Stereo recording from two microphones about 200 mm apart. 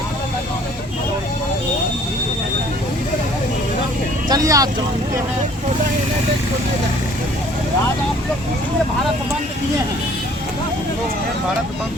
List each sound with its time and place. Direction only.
4.3 s vehicle: 20° right (ahead or behind)